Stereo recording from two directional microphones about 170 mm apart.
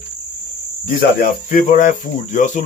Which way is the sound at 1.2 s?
50° left (ahead or behind).